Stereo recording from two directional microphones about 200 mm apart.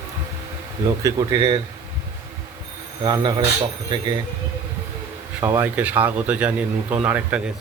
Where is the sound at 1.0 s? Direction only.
20° right (ahead or behind).